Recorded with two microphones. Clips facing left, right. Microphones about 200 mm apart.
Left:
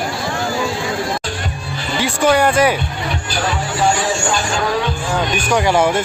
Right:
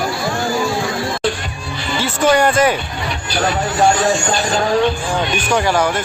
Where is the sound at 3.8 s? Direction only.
40° right (ahead or behind).